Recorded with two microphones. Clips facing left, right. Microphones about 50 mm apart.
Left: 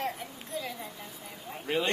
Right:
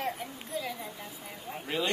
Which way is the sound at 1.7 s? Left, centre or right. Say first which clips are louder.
Left 3 dB; centre.